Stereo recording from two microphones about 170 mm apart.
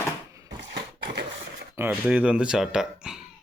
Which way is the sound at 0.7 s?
80° right.